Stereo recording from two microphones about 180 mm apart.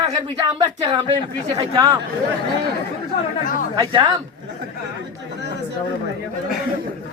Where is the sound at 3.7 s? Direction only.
25° right (ahead or behind).